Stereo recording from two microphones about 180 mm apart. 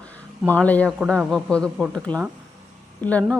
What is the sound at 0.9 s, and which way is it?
A woman's voice, 5° right (ahead or behind).